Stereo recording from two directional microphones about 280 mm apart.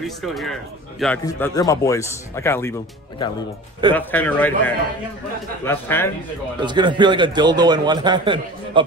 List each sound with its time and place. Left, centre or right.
0.0 s speech: centre
1.2 s a man's voice: centre
3.9 s a man's voice: centre
6.6 s a man's voice: centre